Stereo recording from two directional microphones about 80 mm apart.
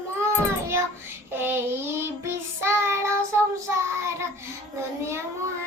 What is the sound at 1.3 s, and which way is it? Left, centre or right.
Child singing, right.